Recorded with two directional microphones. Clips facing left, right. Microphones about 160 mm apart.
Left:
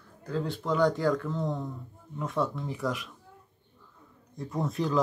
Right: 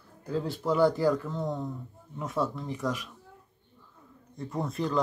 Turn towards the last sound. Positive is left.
turn(degrees=0)  # may be behind; listen again after turning